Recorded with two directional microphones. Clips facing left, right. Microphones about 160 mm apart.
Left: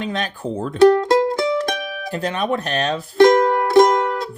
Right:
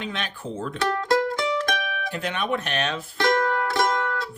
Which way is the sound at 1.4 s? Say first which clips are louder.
Left 5 dB; 35° left (ahead or behind).